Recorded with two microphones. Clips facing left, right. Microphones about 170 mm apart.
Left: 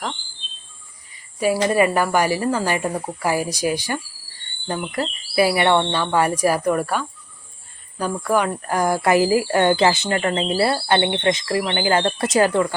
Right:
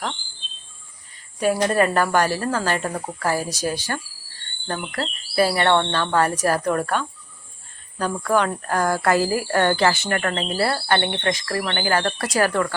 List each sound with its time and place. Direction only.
1.1 s speech: 10° left (ahead or behind)